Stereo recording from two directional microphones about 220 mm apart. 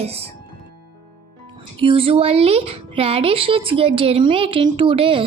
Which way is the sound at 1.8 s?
25° right (ahead or behind).